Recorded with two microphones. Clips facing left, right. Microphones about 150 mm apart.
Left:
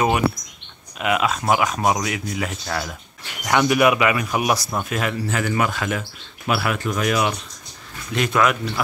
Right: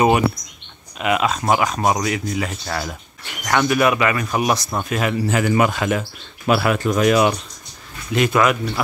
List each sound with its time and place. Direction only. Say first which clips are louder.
0.9 s speech: right 2 dB; centre (ahead or behind)
3.4 s speech: even; 15° left (ahead or behind); by 5.1 s centre (ahead or behind)
5.3 s a man's voice: right 6 dB; 20° right (ahead or behind)
6.4 s speech: right 5 dB; 35° right (ahead or behind)
8.1 s speech: right 3 dB; 5° right (ahead or behind)